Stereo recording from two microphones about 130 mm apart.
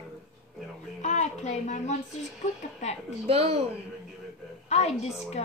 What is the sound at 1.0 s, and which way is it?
A woman's voice, 65° left (ahead or behind).